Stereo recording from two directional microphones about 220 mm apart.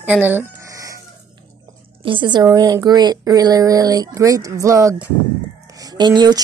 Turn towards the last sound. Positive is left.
turn(degrees=-20)  # may be behind; listen again after turning